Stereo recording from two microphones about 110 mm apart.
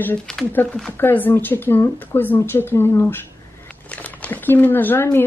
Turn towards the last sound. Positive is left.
turn(degrees=20)  # may be behind; listen again after turning